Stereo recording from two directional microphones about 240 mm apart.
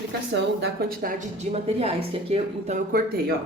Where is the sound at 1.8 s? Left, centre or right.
Right.